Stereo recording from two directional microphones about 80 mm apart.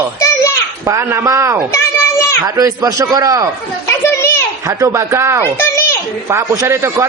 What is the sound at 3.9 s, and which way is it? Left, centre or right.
Children playing, left.